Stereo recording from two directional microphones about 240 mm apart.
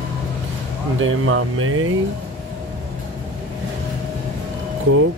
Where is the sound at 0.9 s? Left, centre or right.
Right.